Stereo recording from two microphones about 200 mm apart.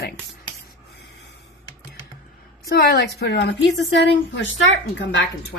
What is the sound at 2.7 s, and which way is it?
A woman's voice, 50° left (ahead or behind).